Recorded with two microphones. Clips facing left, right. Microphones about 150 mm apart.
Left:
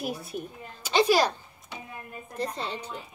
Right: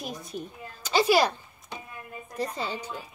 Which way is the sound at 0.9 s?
10° right (ahead or behind).